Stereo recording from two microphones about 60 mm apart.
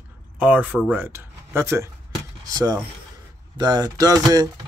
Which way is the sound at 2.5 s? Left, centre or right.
Right.